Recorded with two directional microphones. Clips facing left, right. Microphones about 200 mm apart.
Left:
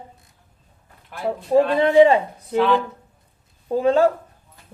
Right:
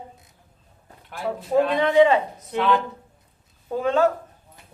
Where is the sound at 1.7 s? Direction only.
30° left (ahead or behind).